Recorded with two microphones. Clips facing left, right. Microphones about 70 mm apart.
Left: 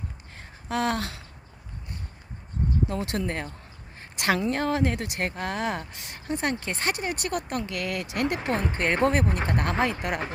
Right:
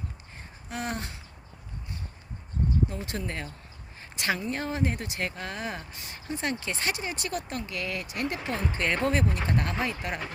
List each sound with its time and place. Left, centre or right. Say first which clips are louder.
0.3 s a sound: left 8 dB; left
2.9 s speech: left 6 dB; left
3.2 s speech: left 4 dB; left
4.2 s speech: left 5 dB; left
8.4 s speech: left 4 dB; left
9.8 s speech: left 5 dB; left